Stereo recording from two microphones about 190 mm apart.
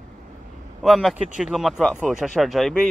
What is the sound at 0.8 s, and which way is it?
Speech, centre (ahead or behind).